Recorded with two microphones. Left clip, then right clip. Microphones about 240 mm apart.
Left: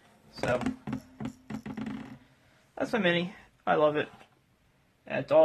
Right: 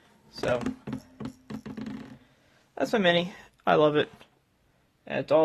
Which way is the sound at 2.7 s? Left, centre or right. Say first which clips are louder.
Right 4 dB; right.